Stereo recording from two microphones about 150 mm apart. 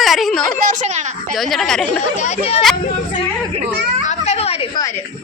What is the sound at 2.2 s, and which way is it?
Speech, 45° left (ahead or behind).